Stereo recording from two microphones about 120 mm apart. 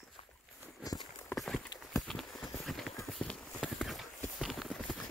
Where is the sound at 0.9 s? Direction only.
30° left (ahead or behind).